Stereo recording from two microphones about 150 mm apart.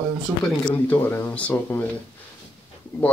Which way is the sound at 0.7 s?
15° left (ahead or behind).